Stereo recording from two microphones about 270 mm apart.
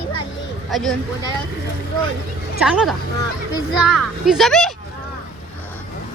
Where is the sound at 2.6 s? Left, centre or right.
Centre.